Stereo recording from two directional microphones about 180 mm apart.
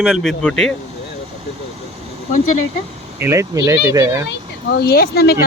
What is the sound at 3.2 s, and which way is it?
Speech, 15° right (ahead or behind).